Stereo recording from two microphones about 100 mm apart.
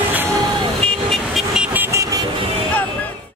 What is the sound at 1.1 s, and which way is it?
Vehicle, centre (ahead or behind).